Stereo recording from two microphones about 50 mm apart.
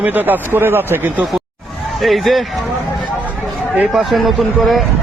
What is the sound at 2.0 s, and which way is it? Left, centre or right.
Speech, centre.